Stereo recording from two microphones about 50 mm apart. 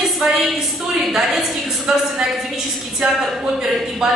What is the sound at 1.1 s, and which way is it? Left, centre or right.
Speech, centre.